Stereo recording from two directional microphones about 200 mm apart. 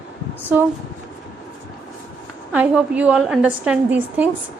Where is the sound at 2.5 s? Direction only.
5° right (ahead or behind).